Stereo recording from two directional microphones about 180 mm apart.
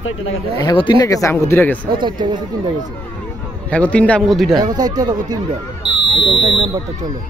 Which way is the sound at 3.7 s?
5° left (ahead or behind).